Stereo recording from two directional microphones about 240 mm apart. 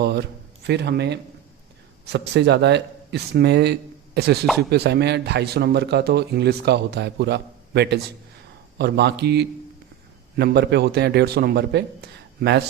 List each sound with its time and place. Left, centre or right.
0.0 s a man's voice: right